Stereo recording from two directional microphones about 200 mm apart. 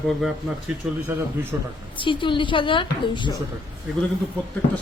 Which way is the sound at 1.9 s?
25° left (ahead or behind).